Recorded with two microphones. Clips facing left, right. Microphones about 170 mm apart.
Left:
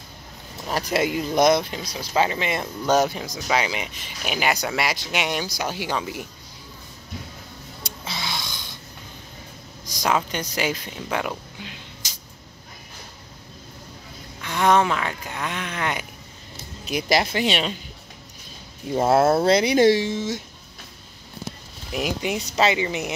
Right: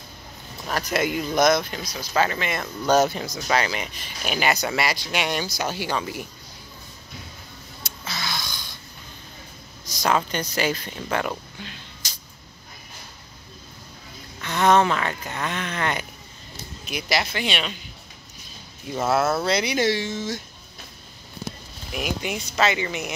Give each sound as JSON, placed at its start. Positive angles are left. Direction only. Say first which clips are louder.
{"t": 0.7, "sound": "speech", "louder": "left 1 dB", "side_deg": 30}
{"t": 4.5, "sound": "speech", "louder": "even", "side_deg": 0}
{"t": 4.8, "sound": "speech", "louder": "even", "side_deg": 15}
{"t": 8.2, "sound": "snort", "louder": "right 1 dB", "side_deg": 25}
{"t": 9.8, "sound": "a sound", "louder": "even", "side_deg": 15}
{"t": 10.1, "sound": "speech", "louder": "right 1 dB", "side_deg": 15}
{"t": 14.4, "sound": "speech", "louder": "right 1 dB", "side_deg": 10}
{"t": 16.8, "sound": "speech", "louder": "left 4 dB", "side_deg": 40}
{"t": 18.9, "sound": "speech", "louder": "left 4 dB", "side_deg": 30}
{"t": 21.9, "sound": "speech", "louder": "left 3 dB", "side_deg": 25}
{"t": 22.4, "sound": "speech", "louder": "left 2 dB", "side_deg": 35}